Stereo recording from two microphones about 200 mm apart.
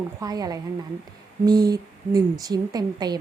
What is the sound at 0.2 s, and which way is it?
A woman's voice, 20° right (ahead or behind).